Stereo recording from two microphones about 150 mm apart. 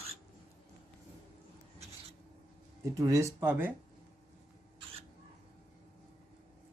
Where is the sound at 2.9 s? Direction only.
20° right (ahead or behind).